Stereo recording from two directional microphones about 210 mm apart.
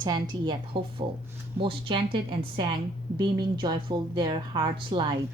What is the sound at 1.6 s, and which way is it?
A woman's voice, 25° right (ahead or behind).